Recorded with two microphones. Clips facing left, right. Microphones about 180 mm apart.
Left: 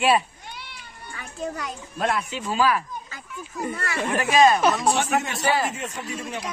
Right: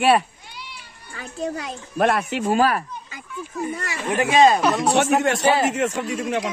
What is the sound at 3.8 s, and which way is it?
Speech, 20° right (ahead or behind).